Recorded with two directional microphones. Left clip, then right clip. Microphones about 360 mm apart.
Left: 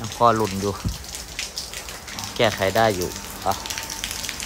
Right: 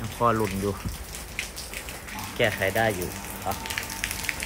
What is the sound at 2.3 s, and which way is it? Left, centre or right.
Speech, left.